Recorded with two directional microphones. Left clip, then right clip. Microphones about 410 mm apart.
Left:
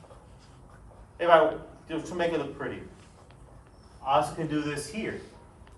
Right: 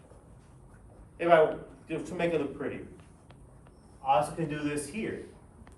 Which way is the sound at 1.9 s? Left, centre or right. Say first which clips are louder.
Left 1 dB; centre.